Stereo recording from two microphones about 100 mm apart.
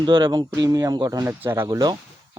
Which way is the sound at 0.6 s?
35° right (ahead or behind).